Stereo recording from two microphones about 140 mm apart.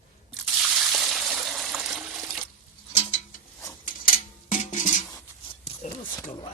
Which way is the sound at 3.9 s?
75° left (ahead or behind).